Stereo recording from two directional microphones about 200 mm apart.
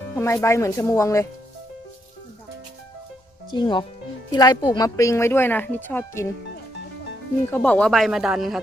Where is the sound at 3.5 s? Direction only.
25° left (ahead or behind).